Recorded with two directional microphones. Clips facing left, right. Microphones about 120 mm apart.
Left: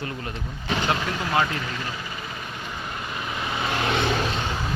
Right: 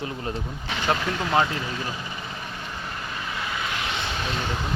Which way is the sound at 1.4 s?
15° right (ahead or behind).